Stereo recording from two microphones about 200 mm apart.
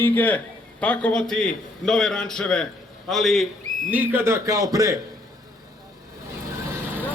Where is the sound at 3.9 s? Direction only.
10° right (ahead or behind).